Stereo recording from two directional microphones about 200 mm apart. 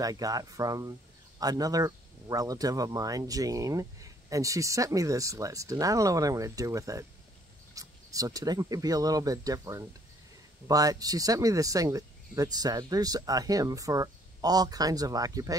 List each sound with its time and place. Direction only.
0.0 s speech: 20° right (ahead or behind)